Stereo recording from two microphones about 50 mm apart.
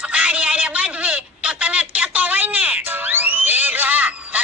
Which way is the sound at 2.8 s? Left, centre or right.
Right.